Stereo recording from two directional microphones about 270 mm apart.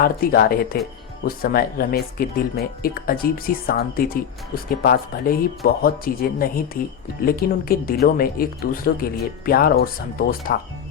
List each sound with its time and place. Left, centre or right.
0.0 s speech: left